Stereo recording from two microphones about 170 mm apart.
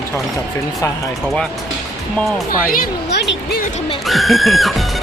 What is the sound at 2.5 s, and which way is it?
Speech, 55° left (ahead or behind).